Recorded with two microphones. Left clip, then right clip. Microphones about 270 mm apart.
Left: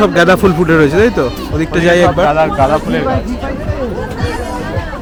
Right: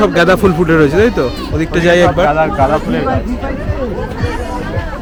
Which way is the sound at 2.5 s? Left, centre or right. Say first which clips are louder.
Left 1 dB; left.